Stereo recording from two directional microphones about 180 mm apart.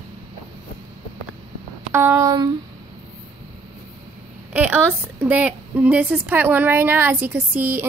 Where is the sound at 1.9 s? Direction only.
15° right (ahead or behind).